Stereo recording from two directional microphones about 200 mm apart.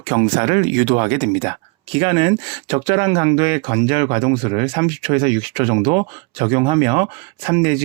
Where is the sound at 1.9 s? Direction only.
25° right (ahead or behind).